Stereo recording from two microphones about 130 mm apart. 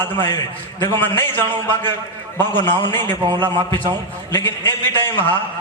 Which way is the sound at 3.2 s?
30° right (ahead or behind).